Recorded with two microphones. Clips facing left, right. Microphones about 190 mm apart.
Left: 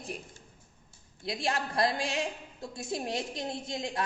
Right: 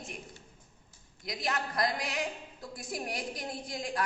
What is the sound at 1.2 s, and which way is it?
A woman's voice, 30° left (ahead or behind).